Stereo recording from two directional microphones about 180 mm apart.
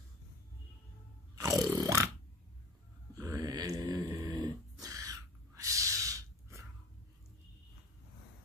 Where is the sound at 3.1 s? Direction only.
20° right (ahead or behind).